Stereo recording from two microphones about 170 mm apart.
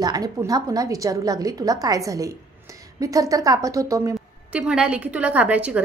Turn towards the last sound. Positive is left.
turn(degrees=-5)  # may be behind; listen again after turning